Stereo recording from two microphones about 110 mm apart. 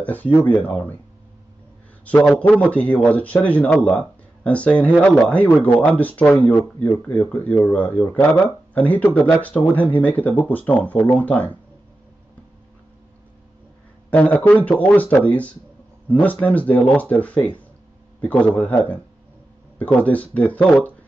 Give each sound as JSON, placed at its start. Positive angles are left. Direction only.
{"t": 0.0, "sound": "a man's voice", "side_deg": 15}
{"t": 2.0, "sound": "a man's voice", "side_deg": 15}
{"t": 14.1, "sound": "a man's voice", "side_deg": 15}